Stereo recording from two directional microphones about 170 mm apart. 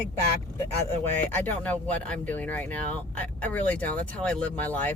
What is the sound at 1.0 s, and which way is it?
Speech, 10° left (ahead or behind).